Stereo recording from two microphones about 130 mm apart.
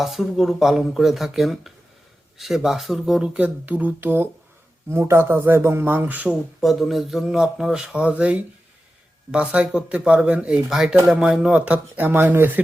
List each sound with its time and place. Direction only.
0.0 s speech: centre (ahead or behind)
6.2 s speech: centre (ahead or behind); by 12.6 s 15° right (ahead or behind)